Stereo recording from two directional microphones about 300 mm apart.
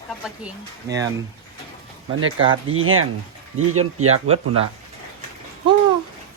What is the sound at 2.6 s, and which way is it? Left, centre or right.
Speech, right.